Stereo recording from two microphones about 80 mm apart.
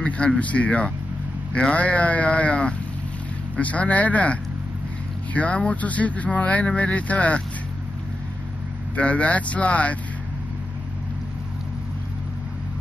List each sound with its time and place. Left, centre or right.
0.0 s speech: centre
8.9 s speech: centre